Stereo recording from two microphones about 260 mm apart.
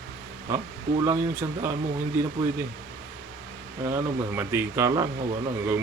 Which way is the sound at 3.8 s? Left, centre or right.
Centre.